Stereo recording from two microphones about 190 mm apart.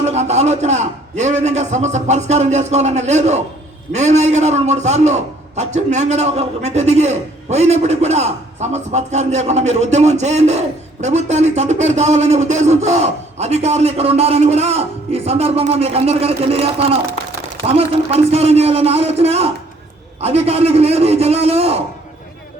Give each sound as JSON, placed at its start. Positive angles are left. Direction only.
{"t": 0.0, "sound": "a man's voice", "side_deg": -35}